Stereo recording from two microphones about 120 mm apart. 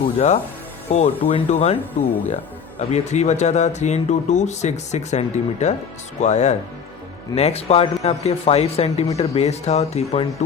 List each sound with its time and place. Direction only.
0.9 s speech: 60° left (ahead or behind)
2.9 s speech: 70° left (ahead or behind)
7.3 s speech: 60° left (ahead or behind)